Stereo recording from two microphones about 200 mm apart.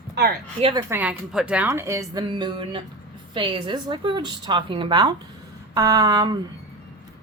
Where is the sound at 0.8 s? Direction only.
10° right (ahead or behind).